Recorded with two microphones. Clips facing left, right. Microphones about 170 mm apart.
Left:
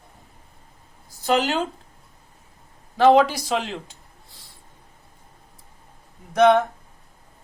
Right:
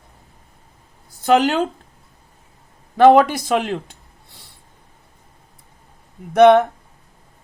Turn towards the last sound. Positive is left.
turn(degrees=-60)  # may be behind; listen again after turning